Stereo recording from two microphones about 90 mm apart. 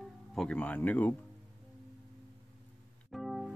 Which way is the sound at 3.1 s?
Centre (ahead or behind).